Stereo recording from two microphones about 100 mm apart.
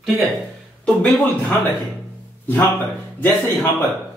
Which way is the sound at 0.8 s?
10° left (ahead or behind).